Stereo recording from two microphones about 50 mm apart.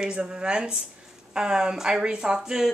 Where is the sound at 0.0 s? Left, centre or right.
Centre.